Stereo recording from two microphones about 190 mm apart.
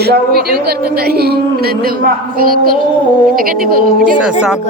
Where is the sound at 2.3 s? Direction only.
50° right (ahead or behind).